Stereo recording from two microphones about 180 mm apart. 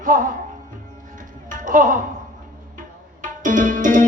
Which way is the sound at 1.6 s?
50° right (ahead or behind).